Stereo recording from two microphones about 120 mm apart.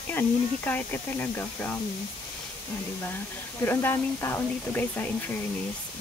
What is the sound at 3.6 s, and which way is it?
Speech, 20° left (ahead or behind).